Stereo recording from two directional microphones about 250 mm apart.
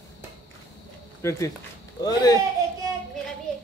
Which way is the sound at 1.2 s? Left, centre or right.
Centre.